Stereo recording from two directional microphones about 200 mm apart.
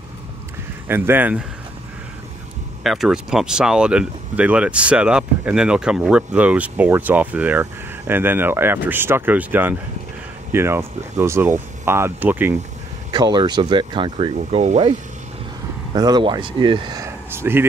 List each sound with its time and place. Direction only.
0.8 s speech: 10° right (ahead or behind)
2.8 s speech: centre (ahead or behind)
13.1 s speech: 20° right (ahead or behind)
15.9 s speech: 20° right (ahead or behind)